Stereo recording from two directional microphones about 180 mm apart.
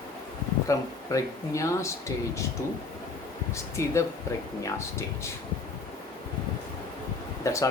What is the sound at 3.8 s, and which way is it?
Speech, 15° left (ahead or behind).